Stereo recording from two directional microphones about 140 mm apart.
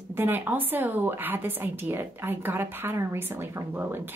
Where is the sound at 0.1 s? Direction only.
15° right (ahead or behind).